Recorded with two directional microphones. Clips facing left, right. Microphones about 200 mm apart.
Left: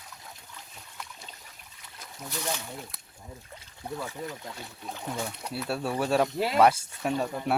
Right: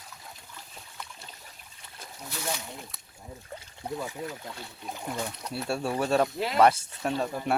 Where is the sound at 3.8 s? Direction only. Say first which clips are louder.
Right 2 dB; 15° right (ahead or behind).